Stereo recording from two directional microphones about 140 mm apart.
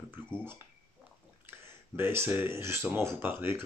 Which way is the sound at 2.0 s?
15° right (ahead or behind).